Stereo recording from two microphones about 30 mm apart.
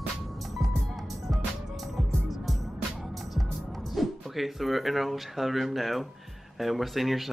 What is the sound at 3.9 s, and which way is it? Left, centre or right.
Speech, centre.